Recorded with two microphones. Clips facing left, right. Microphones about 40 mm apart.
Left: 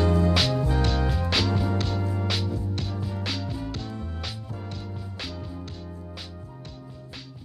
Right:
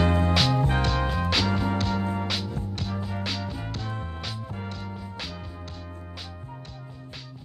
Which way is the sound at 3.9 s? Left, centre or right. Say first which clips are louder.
Right 1 dB; right.